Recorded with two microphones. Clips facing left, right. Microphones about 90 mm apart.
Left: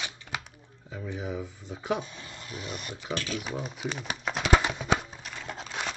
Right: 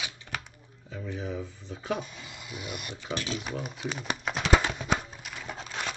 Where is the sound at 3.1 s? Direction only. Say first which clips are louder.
Even; 20° right (ahead or behind).